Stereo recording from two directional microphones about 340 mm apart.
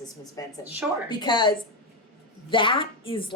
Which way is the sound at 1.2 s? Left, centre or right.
Centre.